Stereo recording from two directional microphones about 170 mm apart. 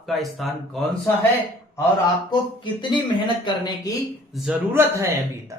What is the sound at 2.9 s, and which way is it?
Speech, 25° left (ahead or behind).